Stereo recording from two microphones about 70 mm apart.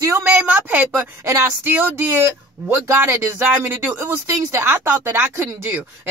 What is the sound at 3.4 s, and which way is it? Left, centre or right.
A woman's voice, right.